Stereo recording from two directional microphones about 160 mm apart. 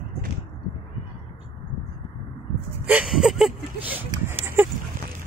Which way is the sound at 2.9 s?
5° right (ahead or behind).